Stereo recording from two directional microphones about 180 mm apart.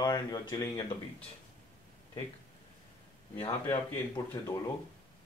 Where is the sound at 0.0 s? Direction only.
20° left (ahead or behind).